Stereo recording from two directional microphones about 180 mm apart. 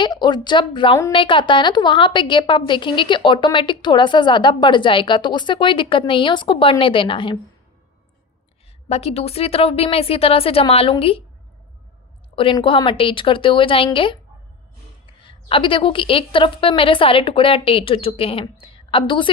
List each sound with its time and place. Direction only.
0.0 s a woman's voice: 25° left (ahead or behind)
8.9 s a woman's voice: 35° left (ahead or behind)
12.4 s a woman's voice: 30° left (ahead or behind)